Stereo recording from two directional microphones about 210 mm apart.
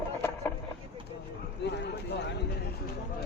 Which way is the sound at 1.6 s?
55° left (ahead or behind).